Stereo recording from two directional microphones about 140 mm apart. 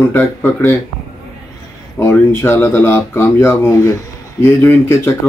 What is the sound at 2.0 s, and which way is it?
Speech, 15° left (ahead or behind).